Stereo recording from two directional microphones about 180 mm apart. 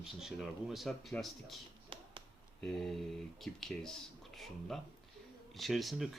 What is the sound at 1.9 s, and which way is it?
Finger snapping, 30° right (ahead or behind).